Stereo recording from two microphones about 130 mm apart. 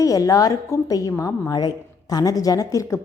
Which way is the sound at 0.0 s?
25° left (ahead or behind).